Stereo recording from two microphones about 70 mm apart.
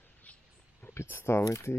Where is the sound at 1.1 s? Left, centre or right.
Left.